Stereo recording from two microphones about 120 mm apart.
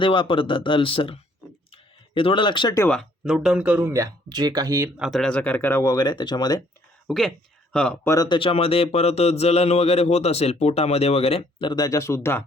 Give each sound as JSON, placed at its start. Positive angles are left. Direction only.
{"t": 0.0, "sound": "speech", "side_deg": 45}
{"t": 1.7, "sound": "a sound", "side_deg": 50}
{"t": 3.2, "sound": "speech", "side_deg": -5}
{"t": 4.9, "sound": "speech", "side_deg": 0}
{"t": 7.1, "sound": "speech", "side_deg": 5}
{"t": 8.0, "sound": "speech", "side_deg": 25}
{"t": 8.3, "sound": "speech", "side_deg": 45}
{"t": 11.7, "sound": "speech", "side_deg": 30}